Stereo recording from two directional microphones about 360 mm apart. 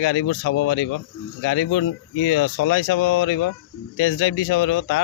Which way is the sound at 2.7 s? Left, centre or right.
Left.